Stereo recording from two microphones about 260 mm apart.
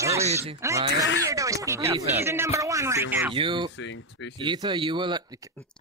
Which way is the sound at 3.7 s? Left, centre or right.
Left.